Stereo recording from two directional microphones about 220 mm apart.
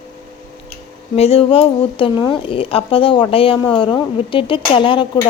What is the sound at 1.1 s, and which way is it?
A woman's voice, 25° left (ahead or behind).